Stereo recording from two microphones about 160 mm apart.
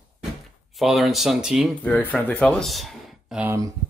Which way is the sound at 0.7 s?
Centre (ahead or behind).